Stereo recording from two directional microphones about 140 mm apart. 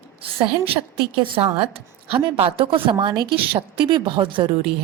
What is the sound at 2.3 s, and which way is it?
A woman's voice, 40° right (ahead or behind).